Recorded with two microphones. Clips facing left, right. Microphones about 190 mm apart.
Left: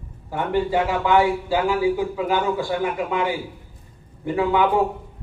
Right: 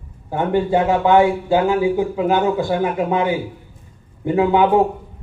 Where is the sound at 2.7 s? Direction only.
40° right (ahead or behind).